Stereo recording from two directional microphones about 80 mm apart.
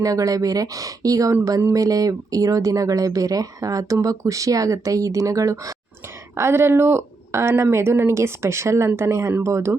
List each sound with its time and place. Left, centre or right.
0.0 s speech: right
6.3 s speech: right